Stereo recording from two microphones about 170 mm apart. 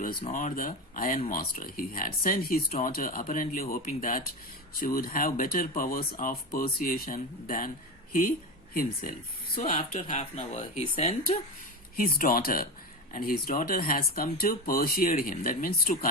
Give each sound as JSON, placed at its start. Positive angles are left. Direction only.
{"t": 0.0, "sound": "speech", "side_deg": 55}
{"t": 8.7, "sound": "speech", "side_deg": 60}
{"t": 9.6, "sound": "speech", "side_deg": 45}
{"t": 11.9, "sound": "speech", "side_deg": 55}